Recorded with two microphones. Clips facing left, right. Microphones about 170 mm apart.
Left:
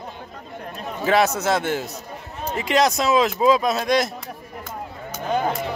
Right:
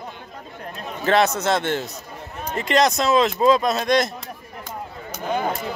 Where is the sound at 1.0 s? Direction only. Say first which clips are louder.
Even; 5° left (ahead or behind).